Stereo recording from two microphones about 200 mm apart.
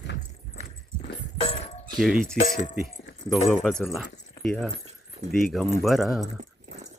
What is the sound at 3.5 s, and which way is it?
Speech, centre (ahead or behind).